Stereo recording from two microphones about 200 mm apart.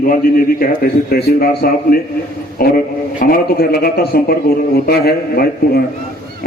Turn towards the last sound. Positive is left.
turn(degrees=50)  # may be behind; listen again after turning